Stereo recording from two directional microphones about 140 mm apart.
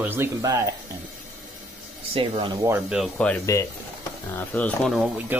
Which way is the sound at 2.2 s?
40° right (ahead or behind).